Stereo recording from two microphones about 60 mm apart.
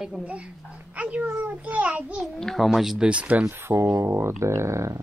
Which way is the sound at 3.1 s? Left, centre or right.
Right.